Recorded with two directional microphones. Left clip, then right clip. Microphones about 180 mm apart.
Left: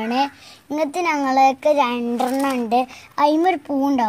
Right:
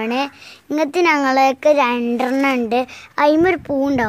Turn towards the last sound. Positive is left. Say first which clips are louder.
# right 2 dB
turn(degrees=-35)  # may be behind; listen again after turning